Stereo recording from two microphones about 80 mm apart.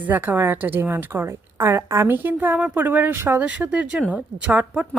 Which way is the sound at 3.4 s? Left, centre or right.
Centre.